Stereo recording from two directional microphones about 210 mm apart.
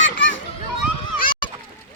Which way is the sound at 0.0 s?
60° left (ahead or behind).